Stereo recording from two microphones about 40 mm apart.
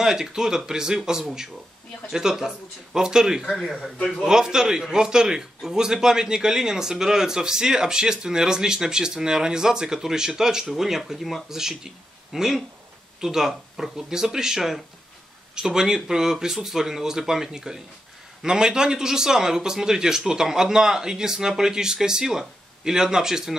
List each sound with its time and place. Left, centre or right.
0.0 s a man's voice: centre